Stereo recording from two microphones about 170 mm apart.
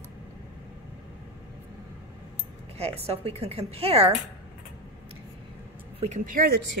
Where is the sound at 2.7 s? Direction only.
35° right (ahead or behind).